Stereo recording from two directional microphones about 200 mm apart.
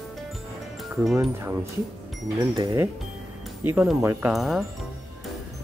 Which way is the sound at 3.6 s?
5° right (ahead or behind).